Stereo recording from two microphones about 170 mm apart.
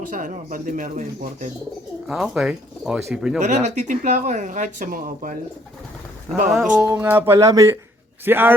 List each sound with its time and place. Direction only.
0.1 s speech: 50° right (ahead or behind)
2.0 s speech: 5° right (ahead or behind)
3.4 s speech: 45° right (ahead or behind)
6.5 s speech: centre (ahead or behind)
6.8 s speech: 10° right (ahead or behind)